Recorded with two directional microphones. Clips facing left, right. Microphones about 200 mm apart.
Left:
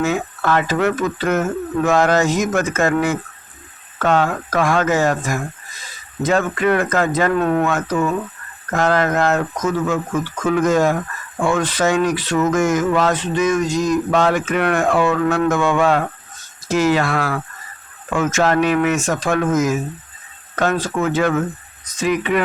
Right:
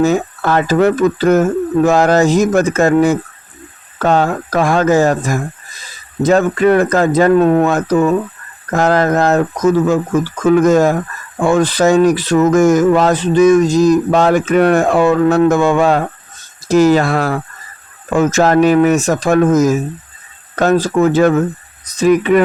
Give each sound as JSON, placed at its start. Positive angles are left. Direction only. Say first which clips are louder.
{"t": 0.0, "sound": "speech", "louder": "right 6 dB", "side_deg": -35}